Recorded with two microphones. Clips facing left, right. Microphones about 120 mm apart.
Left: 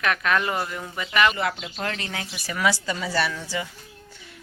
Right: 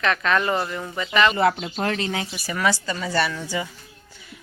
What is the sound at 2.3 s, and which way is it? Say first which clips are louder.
Speech: left 1 dB; centre (ahead or behind).